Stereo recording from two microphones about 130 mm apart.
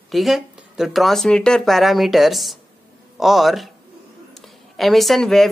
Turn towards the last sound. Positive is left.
turn(degrees=0)  # may be behind; listen again after turning